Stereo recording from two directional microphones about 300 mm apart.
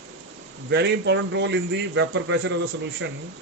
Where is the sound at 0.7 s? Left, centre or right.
Right.